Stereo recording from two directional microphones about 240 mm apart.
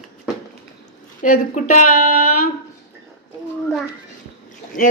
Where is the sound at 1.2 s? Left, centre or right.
Left.